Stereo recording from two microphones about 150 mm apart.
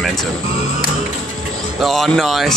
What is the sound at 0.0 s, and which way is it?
Music, centre (ahead or behind).